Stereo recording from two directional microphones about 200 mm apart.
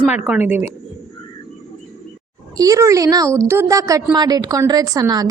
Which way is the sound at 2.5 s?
15° right (ahead or behind).